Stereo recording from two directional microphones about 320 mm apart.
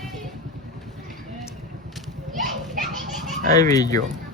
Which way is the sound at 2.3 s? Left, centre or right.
Right.